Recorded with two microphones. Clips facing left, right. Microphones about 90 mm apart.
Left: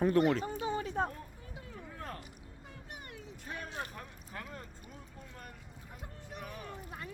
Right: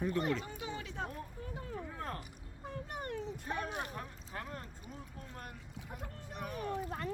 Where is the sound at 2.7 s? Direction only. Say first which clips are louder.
Right 9 dB; 45° right (ahead or behind).